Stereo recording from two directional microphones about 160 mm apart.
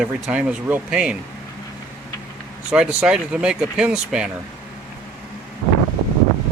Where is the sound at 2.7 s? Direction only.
5° right (ahead or behind).